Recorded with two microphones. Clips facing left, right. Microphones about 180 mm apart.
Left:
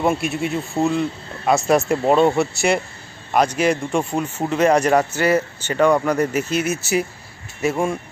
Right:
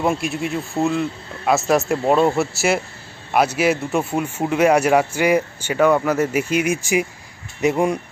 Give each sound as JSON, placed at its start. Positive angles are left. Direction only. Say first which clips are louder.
{"t": 0.0, "sound": "speech", "louder": "left 1 dB", "side_deg": 0}